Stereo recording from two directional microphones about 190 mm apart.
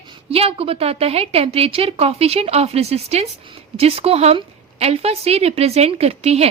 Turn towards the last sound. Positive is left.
turn(degrees=-35)  # may be behind; listen again after turning